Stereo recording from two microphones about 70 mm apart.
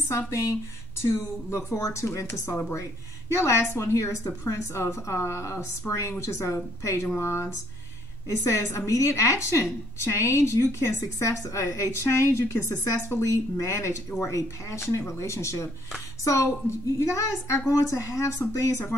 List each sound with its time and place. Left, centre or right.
0.3 s a woman's voice: left
1.8 s a woman's voice: left